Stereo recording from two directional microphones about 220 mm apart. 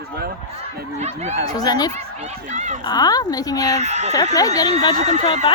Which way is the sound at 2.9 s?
20° left (ahead or behind).